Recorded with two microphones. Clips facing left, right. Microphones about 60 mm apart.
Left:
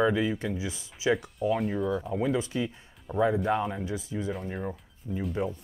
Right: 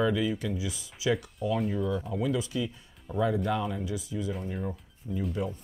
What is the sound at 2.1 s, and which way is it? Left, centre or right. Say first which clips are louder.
Speech: left 2 dB; left.